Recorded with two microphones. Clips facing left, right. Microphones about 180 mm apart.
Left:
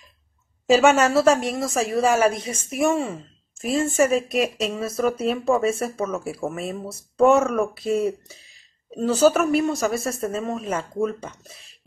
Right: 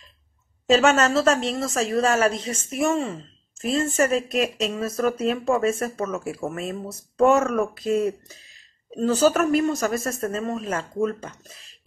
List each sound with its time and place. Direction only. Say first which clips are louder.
0.7 s a woman's voice: left 2 dB; 10° left (ahead or behind)